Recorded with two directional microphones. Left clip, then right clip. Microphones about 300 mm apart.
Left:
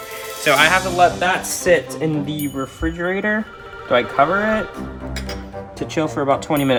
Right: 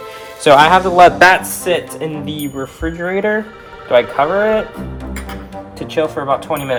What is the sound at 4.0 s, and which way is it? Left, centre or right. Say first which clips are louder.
Speech: right 4 dB; left.